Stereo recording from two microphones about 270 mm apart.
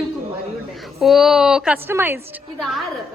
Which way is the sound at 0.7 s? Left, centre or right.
Centre.